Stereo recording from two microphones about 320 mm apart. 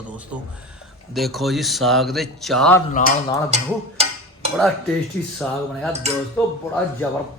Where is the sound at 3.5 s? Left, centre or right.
Right.